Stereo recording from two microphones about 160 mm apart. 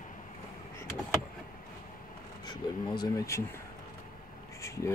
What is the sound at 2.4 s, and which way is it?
Speech, 25° left (ahead or behind).